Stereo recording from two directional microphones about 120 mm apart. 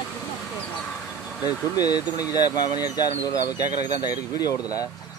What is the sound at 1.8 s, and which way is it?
Speech, 30° left (ahead or behind).